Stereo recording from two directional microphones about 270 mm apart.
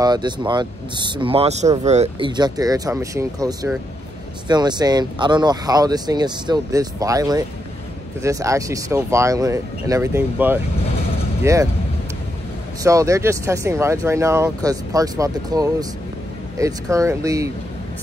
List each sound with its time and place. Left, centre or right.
0.0 s speech: centre
12.8 s speech: centre